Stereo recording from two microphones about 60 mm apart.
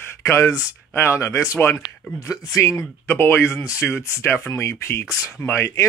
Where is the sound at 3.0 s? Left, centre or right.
Left.